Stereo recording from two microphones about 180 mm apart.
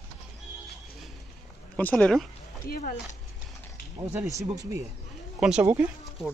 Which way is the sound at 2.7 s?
55° left (ahead or behind).